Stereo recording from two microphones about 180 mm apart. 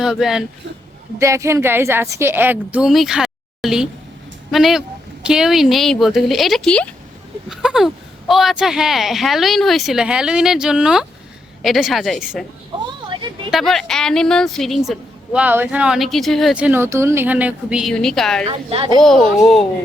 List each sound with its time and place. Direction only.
0.0 s a woman's voice: centre (ahead or behind)
1.2 s a woman's voice: 15° right (ahead or behind); by 12.5 s centre (ahead or behind)
13.5 s a woman's voice: centre (ahead or behind)
18.4 s a woman's voice: 30° right (ahead or behind)
19.0 s a woman's voice: centre (ahead or behind)